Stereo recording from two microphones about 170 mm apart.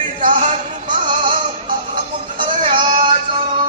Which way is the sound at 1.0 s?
30° right (ahead or behind).